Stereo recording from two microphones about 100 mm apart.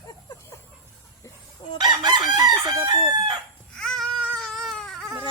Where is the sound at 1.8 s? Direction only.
45° right (ahead or behind).